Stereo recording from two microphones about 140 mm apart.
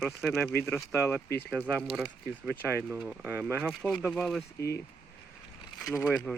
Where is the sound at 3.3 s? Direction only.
15° right (ahead or behind).